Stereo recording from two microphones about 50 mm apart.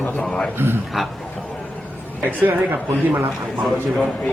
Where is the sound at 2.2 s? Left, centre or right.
Right.